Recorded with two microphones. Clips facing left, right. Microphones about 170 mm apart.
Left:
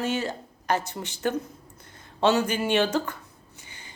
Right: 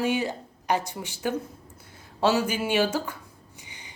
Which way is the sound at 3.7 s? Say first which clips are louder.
Even; 15° right (ahead or behind).